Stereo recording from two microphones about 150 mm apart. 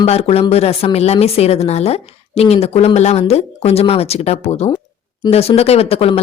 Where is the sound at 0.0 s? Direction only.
45° left (ahead or behind).